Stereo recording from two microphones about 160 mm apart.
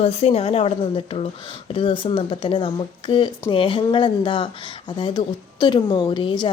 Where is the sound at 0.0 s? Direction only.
40° left (ahead or behind).